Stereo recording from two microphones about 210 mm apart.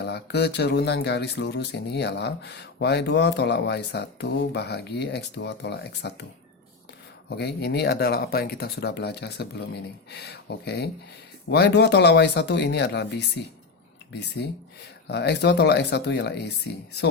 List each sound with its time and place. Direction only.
0.0 s speech: 55° left (ahead or behind)
7.3 s speech: 55° left (ahead or behind)